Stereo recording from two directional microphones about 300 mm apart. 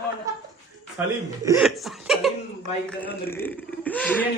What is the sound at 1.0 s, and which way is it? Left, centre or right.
Speech, centre.